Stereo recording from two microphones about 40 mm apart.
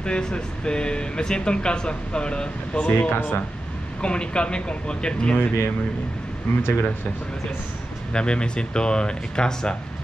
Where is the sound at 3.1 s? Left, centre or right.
Left.